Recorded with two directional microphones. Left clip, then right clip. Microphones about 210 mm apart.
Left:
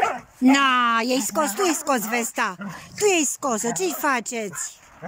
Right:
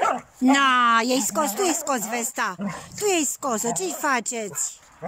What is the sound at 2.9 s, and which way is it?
Speech, centre (ahead or behind).